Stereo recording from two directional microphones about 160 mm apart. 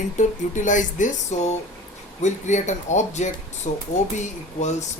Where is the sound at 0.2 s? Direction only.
50° left (ahead or behind).